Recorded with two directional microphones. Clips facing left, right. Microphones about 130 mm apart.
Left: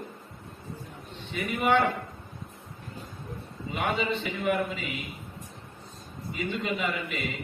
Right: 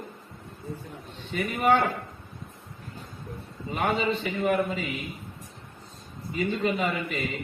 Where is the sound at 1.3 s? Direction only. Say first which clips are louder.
Right 2 dB; 40° right (ahead or behind).